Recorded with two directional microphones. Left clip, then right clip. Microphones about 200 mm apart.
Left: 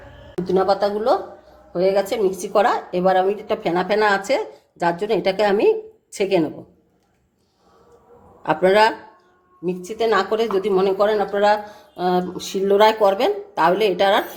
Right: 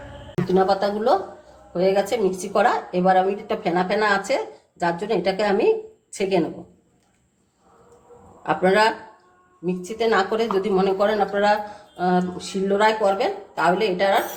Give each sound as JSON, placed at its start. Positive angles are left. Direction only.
{"t": 0.4, "sound": "speech", "side_deg": 50}
{"t": 8.4, "sound": "speech", "side_deg": 50}